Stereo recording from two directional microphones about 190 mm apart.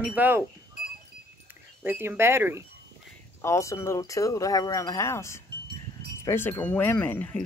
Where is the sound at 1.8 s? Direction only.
10° right (ahead or behind).